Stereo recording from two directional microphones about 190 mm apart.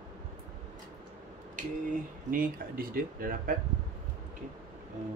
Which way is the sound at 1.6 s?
45° right (ahead or behind).